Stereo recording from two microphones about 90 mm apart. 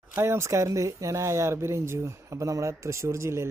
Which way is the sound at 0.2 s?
25° right (ahead or behind).